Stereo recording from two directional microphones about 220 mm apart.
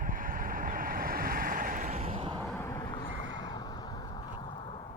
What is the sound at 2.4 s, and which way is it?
Vehicle, 10° left (ahead or behind).